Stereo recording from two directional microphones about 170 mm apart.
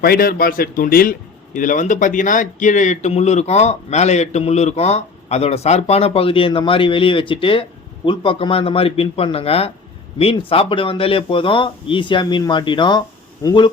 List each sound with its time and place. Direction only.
0.0 s a man's voice: 60° left (ahead or behind); by 13.7 s 25° left (ahead or behind)